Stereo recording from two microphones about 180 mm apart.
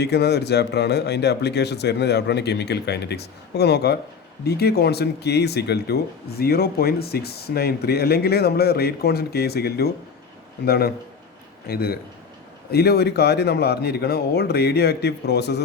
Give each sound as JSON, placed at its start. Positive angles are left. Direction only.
{"t": 0.0, "sound": "speech", "side_deg": 65}